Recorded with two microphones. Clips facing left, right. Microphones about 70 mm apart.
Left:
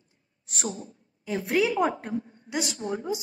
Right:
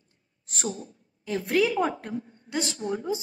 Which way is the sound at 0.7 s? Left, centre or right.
Left.